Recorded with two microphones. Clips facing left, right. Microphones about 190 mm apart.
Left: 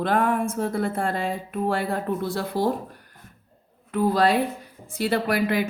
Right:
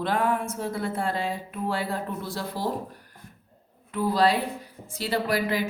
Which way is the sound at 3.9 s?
50° left (ahead or behind).